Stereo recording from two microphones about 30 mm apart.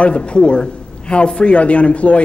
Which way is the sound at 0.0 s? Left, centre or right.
Left.